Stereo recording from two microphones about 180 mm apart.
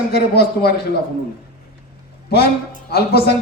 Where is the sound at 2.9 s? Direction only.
60° left (ahead or behind).